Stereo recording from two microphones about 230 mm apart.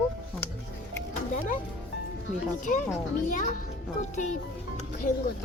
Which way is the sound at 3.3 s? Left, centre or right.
Left.